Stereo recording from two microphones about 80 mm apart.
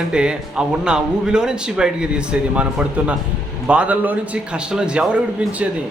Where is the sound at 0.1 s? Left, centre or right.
Centre.